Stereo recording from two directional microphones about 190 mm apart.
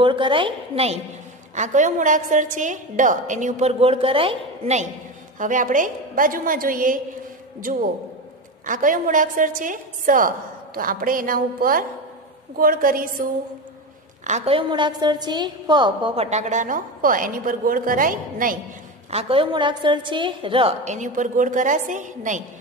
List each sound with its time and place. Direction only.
0.0 s a woman's voice: 25° right (ahead or behind)
5.4 s a woman's voice: 45° right (ahead or behind)
8.6 s a woman's voice: 45° right (ahead or behind)
14.2 s a woman's voice: 35° right (ahead or behind)
19.0 s a woman's voice: 30° right (ahead or behind)